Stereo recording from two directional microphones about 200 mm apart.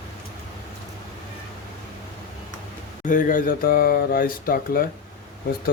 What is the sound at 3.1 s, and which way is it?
Speech, 40° left (ahead or behind).